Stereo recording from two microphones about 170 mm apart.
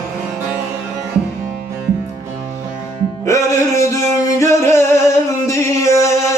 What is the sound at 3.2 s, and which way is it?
Music, 15° left (ahead or behind).